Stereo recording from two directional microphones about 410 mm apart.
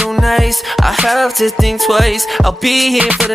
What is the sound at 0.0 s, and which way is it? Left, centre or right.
Music, centre.